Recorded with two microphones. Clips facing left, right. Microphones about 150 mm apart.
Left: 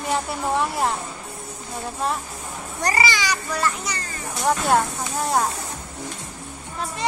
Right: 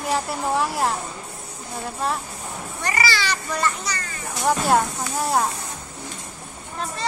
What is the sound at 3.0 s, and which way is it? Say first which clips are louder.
A child's voice: left 1 dB; 15° left (ahead or behind).